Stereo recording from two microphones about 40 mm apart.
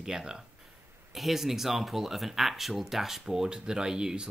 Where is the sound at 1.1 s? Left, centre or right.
Centre.